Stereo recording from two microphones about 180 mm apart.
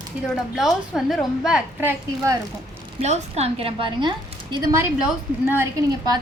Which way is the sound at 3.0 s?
35° right (ahead or behind).